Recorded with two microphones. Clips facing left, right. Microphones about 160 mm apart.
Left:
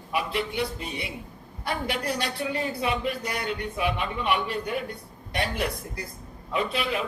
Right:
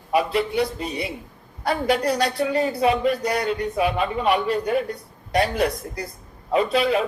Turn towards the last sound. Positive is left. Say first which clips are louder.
# right 8 dB
turn(degrees=-35)  # may be behind; listen again after turning